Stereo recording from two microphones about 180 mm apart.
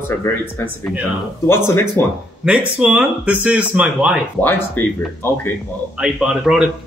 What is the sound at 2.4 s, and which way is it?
Speech, 5° right (ahead or behind).